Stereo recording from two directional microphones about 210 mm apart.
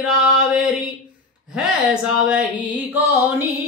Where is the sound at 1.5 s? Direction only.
5° right (ahead or behind).